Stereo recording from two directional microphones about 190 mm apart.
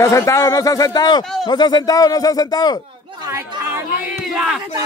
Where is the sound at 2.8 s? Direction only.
25° right (ahead or behind).